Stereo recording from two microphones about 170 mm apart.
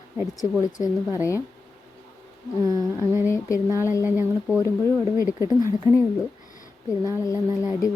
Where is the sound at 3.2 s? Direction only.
15° left (ahead or behind).